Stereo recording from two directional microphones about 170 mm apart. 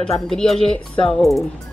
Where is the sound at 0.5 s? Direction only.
30° left (ahead or behind).